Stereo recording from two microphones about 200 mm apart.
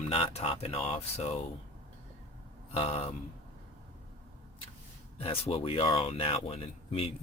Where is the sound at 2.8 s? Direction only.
30° left (ahead or behind).